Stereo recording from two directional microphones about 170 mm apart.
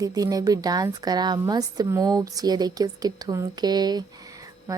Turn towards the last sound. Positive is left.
turn(degrees=-25)  # may be behind; listen again after turning